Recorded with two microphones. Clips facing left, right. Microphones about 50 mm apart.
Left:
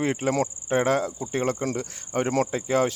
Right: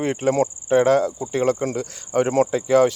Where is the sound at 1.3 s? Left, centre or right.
Right.